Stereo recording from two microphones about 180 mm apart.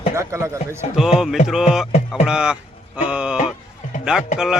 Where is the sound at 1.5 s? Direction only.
5° right (ahead or behind).